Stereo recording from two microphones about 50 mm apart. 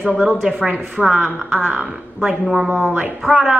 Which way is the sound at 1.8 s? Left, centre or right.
Centre.